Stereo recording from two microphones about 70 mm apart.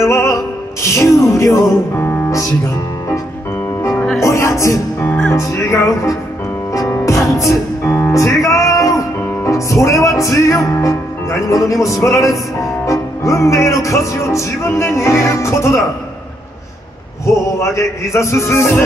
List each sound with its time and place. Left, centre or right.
0.0 s music: left
0.9 s speech: left
4.2 s music: left
17.3 s music: left